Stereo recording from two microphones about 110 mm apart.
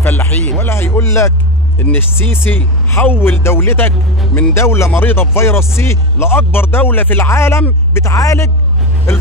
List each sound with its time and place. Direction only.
0.0 s speech: 15° left (ahead or behind)